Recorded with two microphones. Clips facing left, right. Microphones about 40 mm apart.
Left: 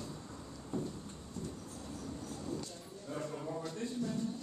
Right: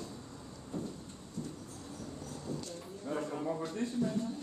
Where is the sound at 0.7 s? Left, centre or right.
Centre.